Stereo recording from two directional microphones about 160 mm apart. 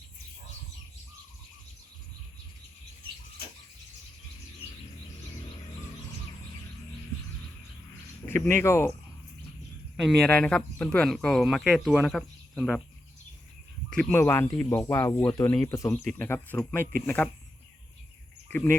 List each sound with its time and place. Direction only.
8.3 s speech: 15° left (ahead or behind)
10.0 s speech: centre (ahead or behind)
13.9 s speech: 10° left (ahead or behind)
18.4 s speech: 15° left (ahead or behind)